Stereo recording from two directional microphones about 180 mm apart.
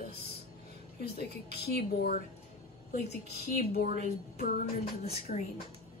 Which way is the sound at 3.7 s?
50° left (ahead or behind).